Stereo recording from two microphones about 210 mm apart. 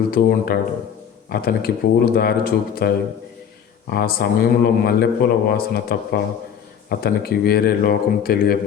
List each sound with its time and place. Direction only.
0.1 s a man's voice: 45° left (ahead or behind)